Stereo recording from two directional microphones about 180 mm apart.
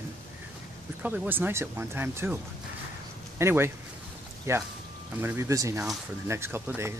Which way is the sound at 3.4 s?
15° right (ahead or behind).